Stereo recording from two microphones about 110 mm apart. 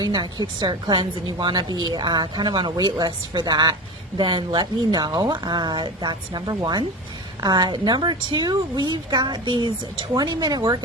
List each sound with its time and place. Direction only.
0.0 s a woman's voice: 40° right (ahead or behind)